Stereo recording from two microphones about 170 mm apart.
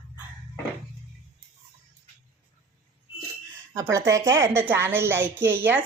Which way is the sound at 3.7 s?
15° right (ahead or behind).